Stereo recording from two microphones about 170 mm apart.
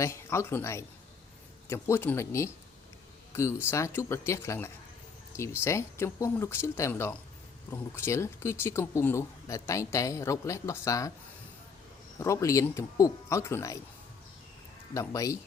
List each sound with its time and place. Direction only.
0.0 s speech: 15° left (ahead or behind)
12.2 s speech: 20° left (ahead or behind)
14.9 s speech: 20° left (ahead or behind)